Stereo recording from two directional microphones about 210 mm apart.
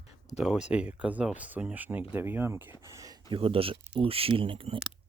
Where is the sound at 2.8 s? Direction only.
15° right (ahead or behind).